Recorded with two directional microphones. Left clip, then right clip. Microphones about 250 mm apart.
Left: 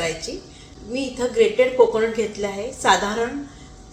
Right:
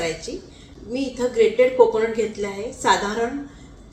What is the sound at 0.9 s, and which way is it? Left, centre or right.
A woman's voice, centre.